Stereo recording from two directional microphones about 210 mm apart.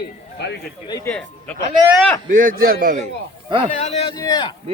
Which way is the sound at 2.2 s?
40° right (ahead or behind).